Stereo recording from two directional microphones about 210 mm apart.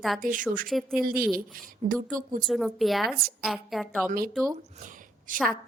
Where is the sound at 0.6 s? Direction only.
Centre (ahead or behind).